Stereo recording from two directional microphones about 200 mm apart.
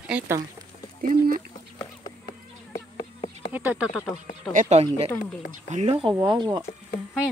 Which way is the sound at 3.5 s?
10° right (ahead or behind).